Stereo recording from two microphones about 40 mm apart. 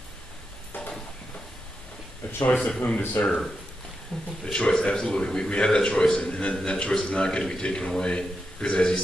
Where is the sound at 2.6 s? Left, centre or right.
Left.